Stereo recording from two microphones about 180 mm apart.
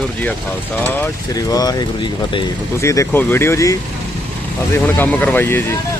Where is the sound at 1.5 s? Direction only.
20° left (ahead or behind).